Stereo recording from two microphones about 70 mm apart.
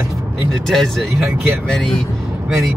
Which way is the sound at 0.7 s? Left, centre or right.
Centre.